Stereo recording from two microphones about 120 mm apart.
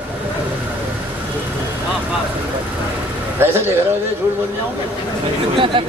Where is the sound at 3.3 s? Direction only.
20° right (ahead or behind).